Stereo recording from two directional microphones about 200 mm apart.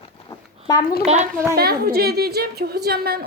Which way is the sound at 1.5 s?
50° right (ahead or behind).